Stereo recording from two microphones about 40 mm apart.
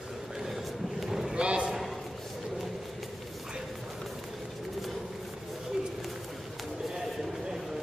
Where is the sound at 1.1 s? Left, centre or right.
Centre.